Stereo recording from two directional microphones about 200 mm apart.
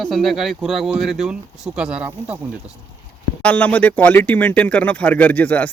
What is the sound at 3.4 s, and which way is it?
Speech, 10° left (ahead or behind).